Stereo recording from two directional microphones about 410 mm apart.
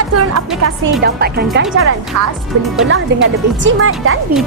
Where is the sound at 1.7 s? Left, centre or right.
Right.